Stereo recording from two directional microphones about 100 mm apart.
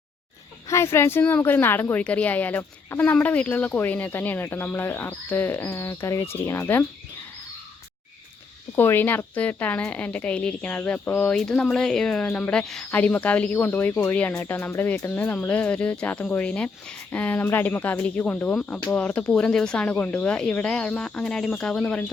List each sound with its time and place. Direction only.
0.7 s a woman's voice: 25° left (ahead or behind)
8.7 s speech: 20° left (ahead or behind)